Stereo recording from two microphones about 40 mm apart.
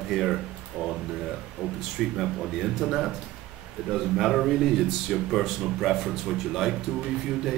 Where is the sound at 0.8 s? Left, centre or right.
Right.